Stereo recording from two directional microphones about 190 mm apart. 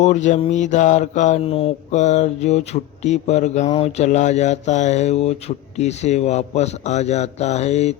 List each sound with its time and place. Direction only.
0.0 s mantra: 40° left (ahead or behind)